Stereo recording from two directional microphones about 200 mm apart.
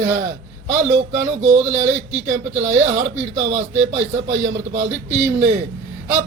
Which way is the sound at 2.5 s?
35° right (ahead or behind).